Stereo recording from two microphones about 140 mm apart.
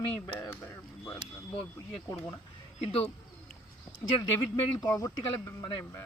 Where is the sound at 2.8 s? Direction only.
45° left (ahead or behind).